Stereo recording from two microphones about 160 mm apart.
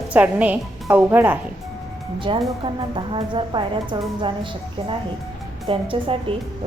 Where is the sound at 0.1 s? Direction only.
10° right (ahead or behind).